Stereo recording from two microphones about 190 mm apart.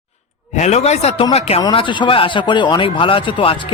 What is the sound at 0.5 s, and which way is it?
Speech, 35° left (ahead or behind).